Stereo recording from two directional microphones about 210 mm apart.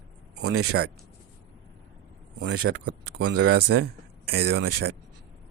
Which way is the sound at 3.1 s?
90° right.